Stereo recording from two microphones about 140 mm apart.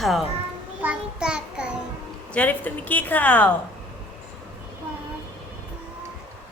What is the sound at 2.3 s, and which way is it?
Speech, 10° left (ahead or behind).